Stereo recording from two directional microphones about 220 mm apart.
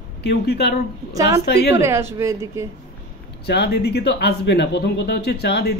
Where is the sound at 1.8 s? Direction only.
10° right (ahead or behind).